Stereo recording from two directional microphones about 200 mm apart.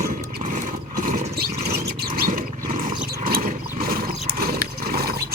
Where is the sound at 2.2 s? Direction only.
40° right (ahead or behind).